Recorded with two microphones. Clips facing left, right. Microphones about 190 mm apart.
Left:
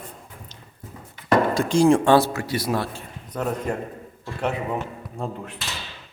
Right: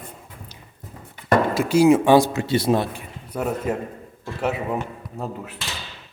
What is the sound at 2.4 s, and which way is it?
Speech, 25° right (ahead or behind).